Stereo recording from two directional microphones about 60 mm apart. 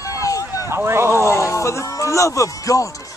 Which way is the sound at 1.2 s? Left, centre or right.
Left.